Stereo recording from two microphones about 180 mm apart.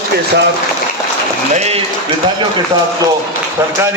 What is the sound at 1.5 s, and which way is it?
Speech, 35° right (ahead or behind).